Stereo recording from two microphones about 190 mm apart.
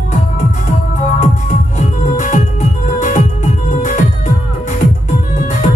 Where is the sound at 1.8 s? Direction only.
40° left (ahead or behind).